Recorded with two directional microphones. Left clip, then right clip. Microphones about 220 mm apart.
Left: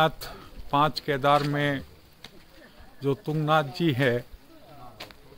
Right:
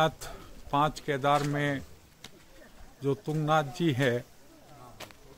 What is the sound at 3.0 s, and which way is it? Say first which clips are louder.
Speech: left 3 dB; 10° left (ahead or behind).